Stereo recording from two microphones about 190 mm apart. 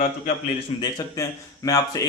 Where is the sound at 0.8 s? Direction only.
20° left (ahead or behind).